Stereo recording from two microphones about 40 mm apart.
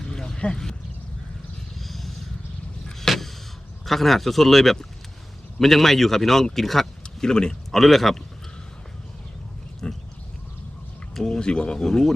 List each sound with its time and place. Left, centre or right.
0.1 s a sound: centre
1.8 s vehicle: centre
3.1 s a sound: centre
3.8 s a man's voice: centre
7.2 s speech: centre
7.7 s a man's voice: centre
9.8 s pig: left
11.2 s speech: left
11.8 s a man's voice: centre